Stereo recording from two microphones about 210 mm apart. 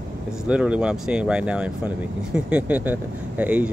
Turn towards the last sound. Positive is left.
turn(degrees=-5)  # may be behind; listen again after turning